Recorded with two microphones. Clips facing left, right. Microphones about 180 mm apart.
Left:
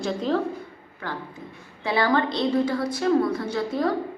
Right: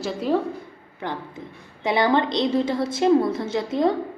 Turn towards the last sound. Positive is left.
turn(degrees=-20)  # may be behind; listen again after turning